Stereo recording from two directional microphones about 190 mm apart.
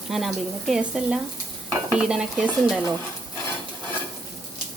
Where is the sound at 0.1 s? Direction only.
Centre (ahead or behind).